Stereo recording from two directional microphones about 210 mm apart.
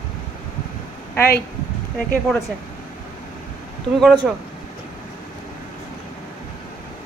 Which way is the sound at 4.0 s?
Centre (ahead or behind).